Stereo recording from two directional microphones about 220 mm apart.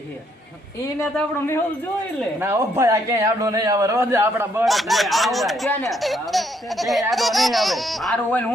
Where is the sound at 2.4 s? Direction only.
10° right (ahead or behind).